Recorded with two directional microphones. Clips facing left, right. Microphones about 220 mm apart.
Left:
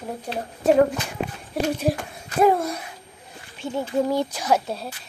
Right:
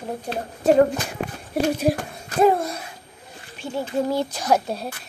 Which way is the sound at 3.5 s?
15° left (ahead or behind).